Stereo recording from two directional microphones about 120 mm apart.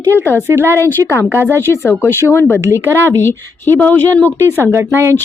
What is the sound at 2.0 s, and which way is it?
Speech, 20° left (ahead or behind).